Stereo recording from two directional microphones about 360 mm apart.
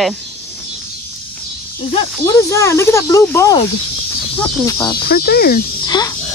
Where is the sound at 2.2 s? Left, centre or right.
Centre.